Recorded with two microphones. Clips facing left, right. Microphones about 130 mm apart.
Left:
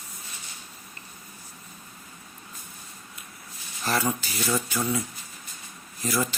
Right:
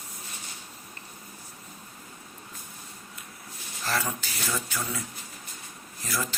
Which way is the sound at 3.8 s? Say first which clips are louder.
Left 4 dB; 15° left (ahead or behind).